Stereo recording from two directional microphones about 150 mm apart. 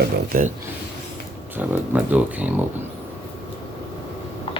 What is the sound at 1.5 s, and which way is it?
Speech, 10° right (ahead or behind).